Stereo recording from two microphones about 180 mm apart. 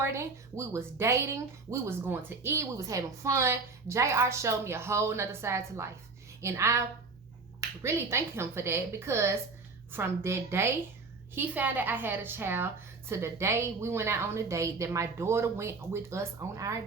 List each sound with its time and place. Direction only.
0.0 s speech: 15° right (ahead or behind)